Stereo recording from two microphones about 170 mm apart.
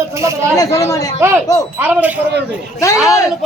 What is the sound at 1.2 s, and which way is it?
Speech, 15° right (ahead or behind).